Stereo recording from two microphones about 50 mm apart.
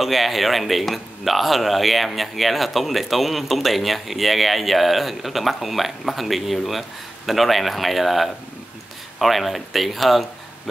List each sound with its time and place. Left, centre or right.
0.0 s speech: centre